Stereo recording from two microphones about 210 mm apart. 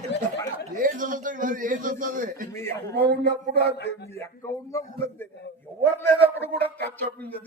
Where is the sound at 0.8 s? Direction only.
40° right (ahead or behind).